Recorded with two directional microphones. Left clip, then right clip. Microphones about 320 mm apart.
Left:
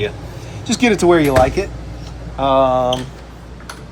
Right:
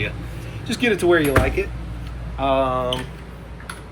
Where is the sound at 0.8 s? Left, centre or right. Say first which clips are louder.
Left 4 dB; left.